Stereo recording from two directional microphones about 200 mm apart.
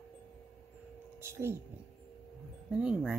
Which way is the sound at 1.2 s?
10° right (ahead or behind).